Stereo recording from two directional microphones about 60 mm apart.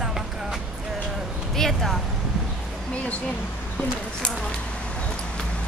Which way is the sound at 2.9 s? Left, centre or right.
Left.